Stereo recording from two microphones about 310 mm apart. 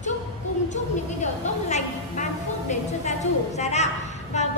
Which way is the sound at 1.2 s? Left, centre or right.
Left.